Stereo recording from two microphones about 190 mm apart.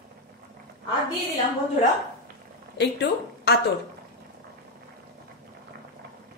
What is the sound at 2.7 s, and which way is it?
Speech, 60° left (ahead or behind).